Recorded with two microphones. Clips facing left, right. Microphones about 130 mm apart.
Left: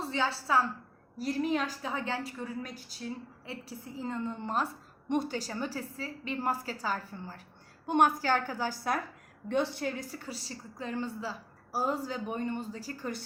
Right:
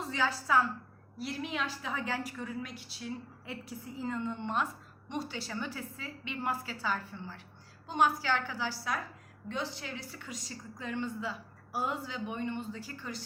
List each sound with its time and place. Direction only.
0.0 s a woman's voice: 30° left (ahead or behind)
1.2 s a woman's voice: 40° left (ahead or behind)
5.0 s a woman's voice: 50° left (ahead or behind)
7.9 s a woman's voice: 55° left (ahead or behind); by 13.1 s 35° left (ahead or behind)